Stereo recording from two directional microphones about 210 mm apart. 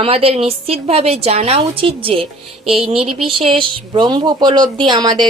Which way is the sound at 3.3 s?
25° right (ahead or behind).